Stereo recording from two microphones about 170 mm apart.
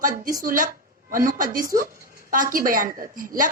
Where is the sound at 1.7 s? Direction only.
55° right (ahead or behind).